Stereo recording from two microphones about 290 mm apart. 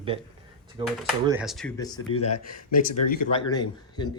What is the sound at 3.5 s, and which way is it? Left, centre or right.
Speech, centre.